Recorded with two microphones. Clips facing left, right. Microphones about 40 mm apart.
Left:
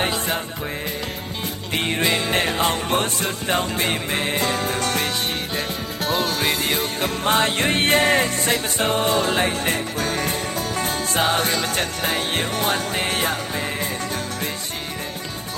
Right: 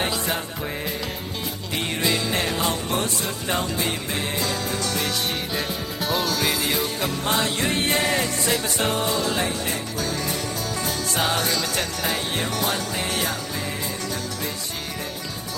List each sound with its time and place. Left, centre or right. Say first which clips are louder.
1.7 s music: left 3 dB; left
6.0 s music: left 2 dB; centre
6.3 s music: left 2 dB; left